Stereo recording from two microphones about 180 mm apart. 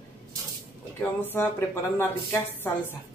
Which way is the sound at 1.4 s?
10° left (ahead or behind).